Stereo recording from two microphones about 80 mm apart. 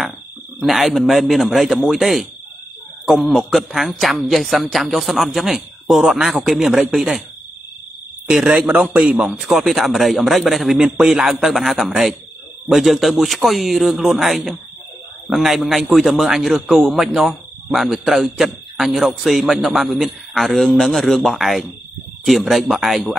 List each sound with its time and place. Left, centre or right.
0.6 s a man's voice: centre
8.3 s a man's voice: centre
8.5 s a man's voice: centre